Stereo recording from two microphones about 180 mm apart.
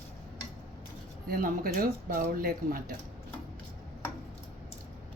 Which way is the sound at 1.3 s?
55° right (ahead or behind).